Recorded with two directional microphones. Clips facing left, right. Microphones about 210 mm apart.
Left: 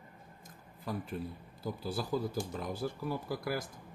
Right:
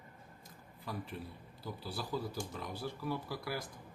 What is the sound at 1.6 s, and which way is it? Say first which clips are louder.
Speech: left 6 dB; 45° left (ahead or behind).